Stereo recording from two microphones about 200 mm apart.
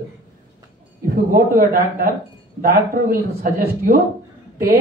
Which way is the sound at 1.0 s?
45° right (ahead or behind).